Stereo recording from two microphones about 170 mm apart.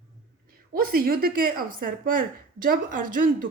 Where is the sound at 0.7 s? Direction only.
60° right (ahead or behind).